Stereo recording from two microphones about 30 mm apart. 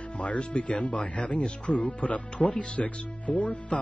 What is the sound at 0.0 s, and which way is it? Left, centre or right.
Speech, left.